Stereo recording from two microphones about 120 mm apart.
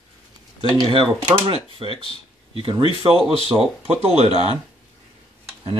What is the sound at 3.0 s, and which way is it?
Speech, 55° right (ahead or behind).